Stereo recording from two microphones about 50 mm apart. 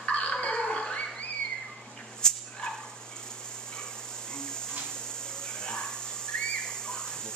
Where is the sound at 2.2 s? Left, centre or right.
Centre.